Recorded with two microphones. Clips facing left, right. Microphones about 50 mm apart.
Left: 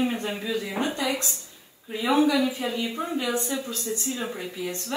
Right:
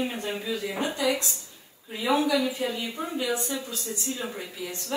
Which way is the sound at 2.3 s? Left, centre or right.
Centre.